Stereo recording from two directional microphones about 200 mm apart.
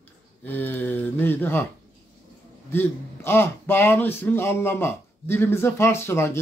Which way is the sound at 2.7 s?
10° left (ahead or behind).